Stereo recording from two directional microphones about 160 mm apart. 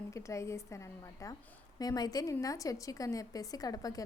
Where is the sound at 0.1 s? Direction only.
20° left (ahead or behind).